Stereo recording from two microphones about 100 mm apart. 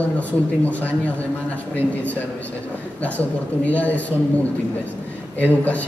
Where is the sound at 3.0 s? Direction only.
15° left (ahead or behind).